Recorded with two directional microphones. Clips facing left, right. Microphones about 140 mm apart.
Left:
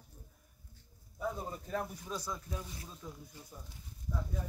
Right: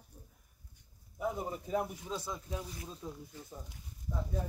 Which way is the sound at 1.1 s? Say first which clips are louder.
Right 2 dB; 15° right (ahead or behind).